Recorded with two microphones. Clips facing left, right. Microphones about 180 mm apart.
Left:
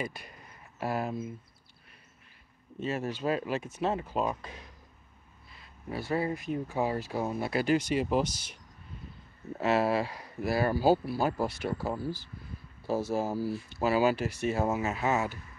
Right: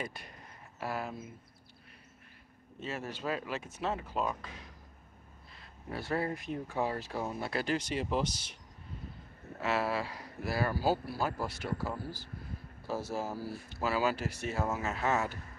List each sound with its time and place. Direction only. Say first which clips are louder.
0.0 s speech: left 4 dB; 5° left (ahead or behind)
0.7 s speech: left 5 dB; 20° left (ahead or behind)
3.1 s speech: left 5 dB; 15° left (ahead or behind)
5.5 s speech: left 3 dB; 5° left (ahead or behind)
9.6 s speech: left 6 dB; 20° left (ahead or behind)